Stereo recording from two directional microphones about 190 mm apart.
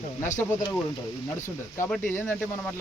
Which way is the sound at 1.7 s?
15° left (ahead or behind).